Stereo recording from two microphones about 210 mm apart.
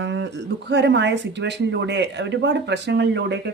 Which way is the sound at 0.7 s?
55° right (ahead or behind).